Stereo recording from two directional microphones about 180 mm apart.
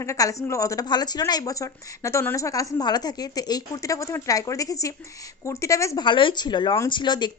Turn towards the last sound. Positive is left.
turn(degrees=25)  # may be behind; listen again after turning